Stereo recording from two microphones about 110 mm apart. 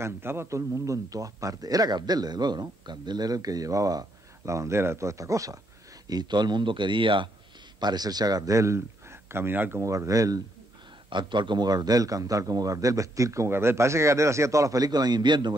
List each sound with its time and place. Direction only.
0.0 s a man's voice: 20° right (ahead or behind)
6.0 s a man's voice: 40° right (ahead or behind)
7.8 s speech: 40° right (ahead or behind)
11.1 s a man's voice: 45° right (ahead or behind)